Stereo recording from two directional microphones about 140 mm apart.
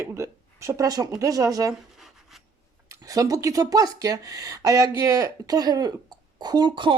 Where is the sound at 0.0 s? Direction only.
20° right (ahead or behind).